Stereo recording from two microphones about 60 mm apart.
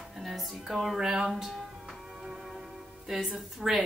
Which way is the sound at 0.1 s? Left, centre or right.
Centre.